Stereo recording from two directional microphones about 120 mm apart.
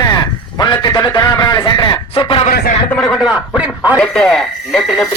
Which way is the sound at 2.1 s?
50° left (ahead or behind).